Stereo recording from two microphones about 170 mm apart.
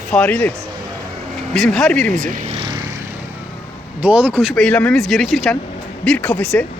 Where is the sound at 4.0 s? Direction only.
10° right (ahead or behind).